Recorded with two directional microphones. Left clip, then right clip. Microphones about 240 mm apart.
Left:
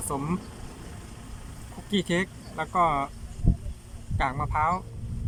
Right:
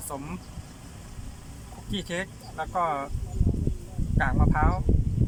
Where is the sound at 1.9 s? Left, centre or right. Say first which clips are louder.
Left 5 dB; centre.